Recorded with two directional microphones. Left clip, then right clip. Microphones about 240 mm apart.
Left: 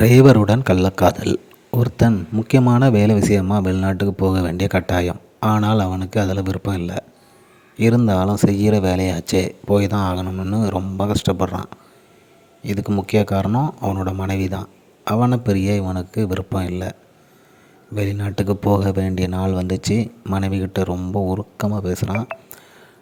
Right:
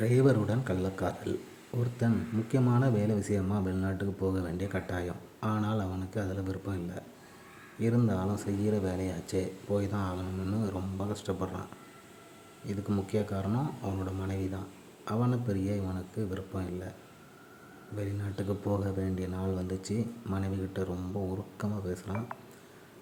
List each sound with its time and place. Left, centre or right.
0.0 s a man's voice: left
17.9 s a man's voice: left